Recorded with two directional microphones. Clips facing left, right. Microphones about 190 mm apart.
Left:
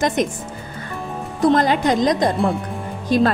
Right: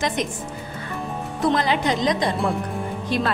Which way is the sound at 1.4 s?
40° left (ahead or behind).